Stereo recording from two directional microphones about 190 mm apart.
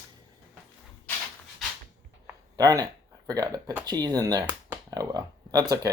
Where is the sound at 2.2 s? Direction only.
20° right (ahead or behind).